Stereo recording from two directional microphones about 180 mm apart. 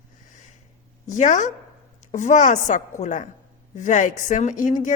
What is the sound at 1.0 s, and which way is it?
A woman's voice, 45° left (ahead or behind).